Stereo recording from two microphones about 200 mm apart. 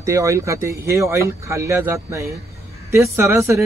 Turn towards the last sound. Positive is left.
turn(degrees=-15)  # may be behind; listen again after turning